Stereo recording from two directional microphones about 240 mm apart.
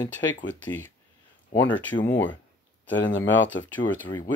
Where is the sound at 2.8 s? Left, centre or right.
Left.